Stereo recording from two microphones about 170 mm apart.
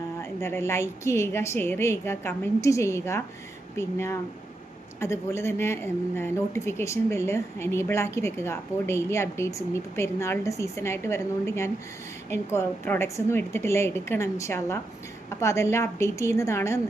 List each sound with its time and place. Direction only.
0.2 s a woman's voice: 15° left (ahead or behind)